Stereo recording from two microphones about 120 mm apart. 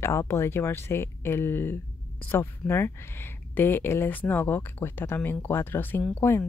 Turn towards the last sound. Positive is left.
turn(degrees=20)  # may be behind; listen again after turning